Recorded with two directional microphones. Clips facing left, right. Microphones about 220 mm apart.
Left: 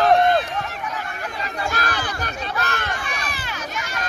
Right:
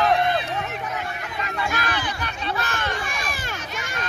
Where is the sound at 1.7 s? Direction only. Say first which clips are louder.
Left 3 dB; 40° left (ahead or behind).